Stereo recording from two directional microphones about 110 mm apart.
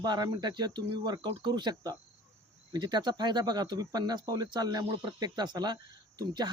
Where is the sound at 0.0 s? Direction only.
40° right (ahead or behind).